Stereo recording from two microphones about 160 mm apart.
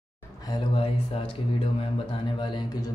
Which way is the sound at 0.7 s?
35° left (ahead or behind).